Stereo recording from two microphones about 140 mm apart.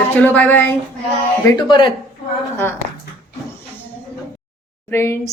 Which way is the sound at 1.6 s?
35° left (ahead or behind).